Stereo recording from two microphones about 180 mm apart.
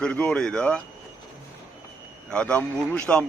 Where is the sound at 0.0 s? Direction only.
5° left (ahead or behind).